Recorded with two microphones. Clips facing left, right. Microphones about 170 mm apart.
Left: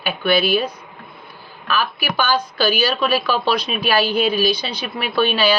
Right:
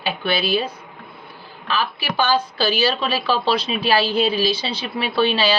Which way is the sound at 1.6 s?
30° right (ahead or behind).